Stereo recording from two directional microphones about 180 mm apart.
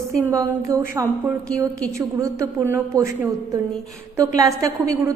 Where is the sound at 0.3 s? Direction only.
15° right (ahead or behind).